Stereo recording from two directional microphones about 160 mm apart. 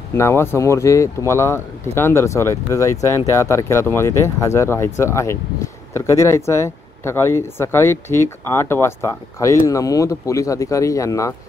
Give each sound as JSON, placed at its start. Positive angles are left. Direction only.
{"t": 0.1, "sound": "speech", "side_deg": 15}